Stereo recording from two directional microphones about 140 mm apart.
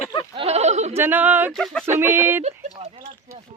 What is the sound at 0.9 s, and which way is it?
Speech, 15° right (ahead or behind).